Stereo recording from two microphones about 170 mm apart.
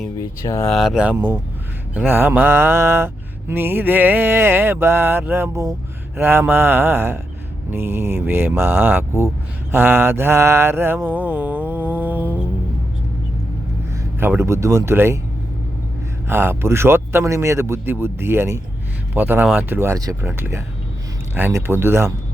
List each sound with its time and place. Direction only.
0.2 s speech: 20° left (ahead or behind)
0.6 s speech: centre (ahead or behind)
9.7 s mantra: 10° right (ahead or behind)
14.2 s speech: 15° right (ahead or behind)
16.2 s speech: 15° right (ahead or behind)